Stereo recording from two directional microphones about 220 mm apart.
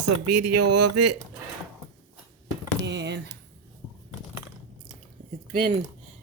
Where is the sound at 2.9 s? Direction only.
50° right (ahead or behind).